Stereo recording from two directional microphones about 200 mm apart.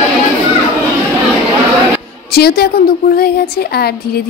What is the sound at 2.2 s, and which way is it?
A woman's voice, 50° left (ahead or behind).